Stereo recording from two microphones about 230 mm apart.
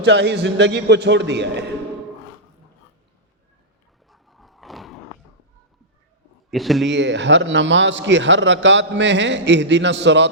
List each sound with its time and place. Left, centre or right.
0.0 s a man's voice: right
4.1 s roar: centre
6.5 s speech: centre
6.9 s a man's voice: right